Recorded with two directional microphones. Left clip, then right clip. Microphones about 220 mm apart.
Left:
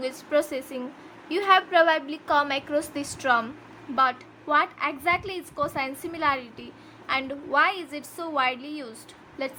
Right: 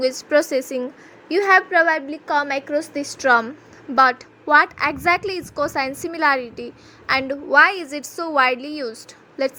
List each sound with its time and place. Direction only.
0.0 s a woman's voice: 25° right (ahead or behind)
2.7 s a woman's voice: centre (ahead or behind)
3.2 s a woman's voice: 20° right (ahead or behind)